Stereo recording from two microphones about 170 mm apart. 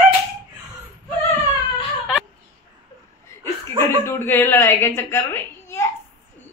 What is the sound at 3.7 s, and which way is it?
A woman's voice, 15° left (ahead or behind).